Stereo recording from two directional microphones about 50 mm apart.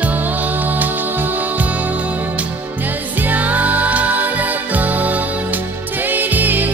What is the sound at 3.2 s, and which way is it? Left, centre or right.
Music, right.